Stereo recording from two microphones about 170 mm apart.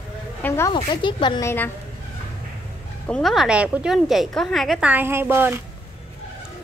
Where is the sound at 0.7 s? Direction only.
30° left (ahead or behind).